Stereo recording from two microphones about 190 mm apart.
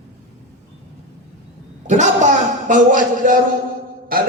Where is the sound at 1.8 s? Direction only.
40° right (ahead or behind).